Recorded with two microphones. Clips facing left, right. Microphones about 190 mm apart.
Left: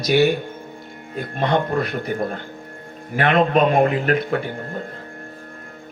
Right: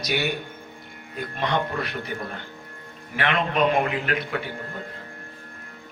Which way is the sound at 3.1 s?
45° left (ahead or behind).